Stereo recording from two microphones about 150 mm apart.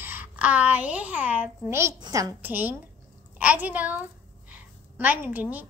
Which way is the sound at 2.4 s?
10° right (ahead or behind).